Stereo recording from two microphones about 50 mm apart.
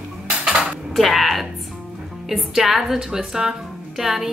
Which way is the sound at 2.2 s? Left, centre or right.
Centre.